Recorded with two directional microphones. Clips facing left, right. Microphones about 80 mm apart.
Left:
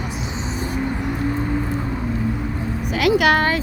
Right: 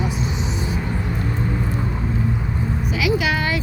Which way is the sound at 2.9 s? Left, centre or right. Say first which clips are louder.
Left 6 dB; left.